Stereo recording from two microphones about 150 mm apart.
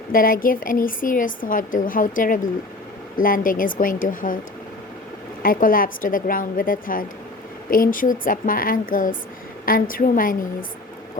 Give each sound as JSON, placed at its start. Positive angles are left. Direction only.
{"t": 0.1, "sound": "a woman's voice", "side_deg": 70}
{"t": 5.4, "sound": "a woman's voice", "side_deg": 70}